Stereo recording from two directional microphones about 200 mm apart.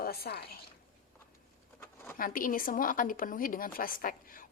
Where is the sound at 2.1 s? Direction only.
45° left (ahead or behind).